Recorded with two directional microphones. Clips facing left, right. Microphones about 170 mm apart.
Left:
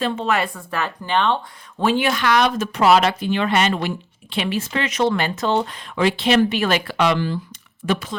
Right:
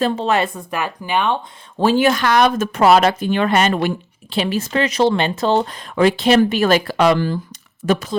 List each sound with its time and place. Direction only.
0.0 s speech: 30° right (ahead or behind); by 1.4 s 10° right (ahead or behind)
1.8 s speech: 40° right (ahead or behind)
6.0 s speech: 45° right (ahead or behind)
7.8 s speech: 25° right (ahead or behind)